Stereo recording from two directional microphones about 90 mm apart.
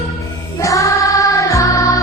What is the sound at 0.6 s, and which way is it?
Music, 35° left (ahead or behind).